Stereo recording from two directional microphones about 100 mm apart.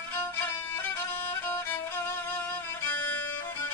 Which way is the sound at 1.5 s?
20° left (ahead or behind).